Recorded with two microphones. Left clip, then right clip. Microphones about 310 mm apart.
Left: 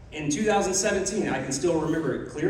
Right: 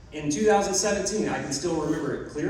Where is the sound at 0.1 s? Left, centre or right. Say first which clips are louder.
Right 2 dB; left.